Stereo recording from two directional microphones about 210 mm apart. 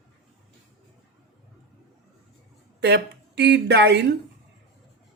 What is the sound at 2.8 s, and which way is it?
A woman's voice, 55° right (ahead or behind).